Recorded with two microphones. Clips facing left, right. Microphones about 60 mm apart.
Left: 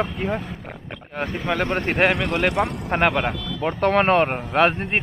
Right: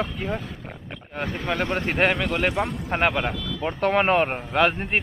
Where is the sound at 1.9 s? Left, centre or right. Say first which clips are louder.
Left 2 dB; centre.